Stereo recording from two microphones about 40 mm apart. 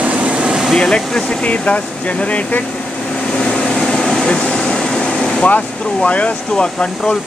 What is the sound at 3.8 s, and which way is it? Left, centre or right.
Air conditioning, left.